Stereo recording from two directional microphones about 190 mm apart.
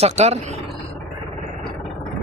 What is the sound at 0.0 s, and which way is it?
Speech, 35° right (ahead or behind).